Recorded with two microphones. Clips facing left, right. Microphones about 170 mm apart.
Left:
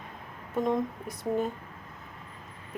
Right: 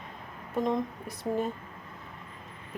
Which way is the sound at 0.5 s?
Centre (ahead or behind).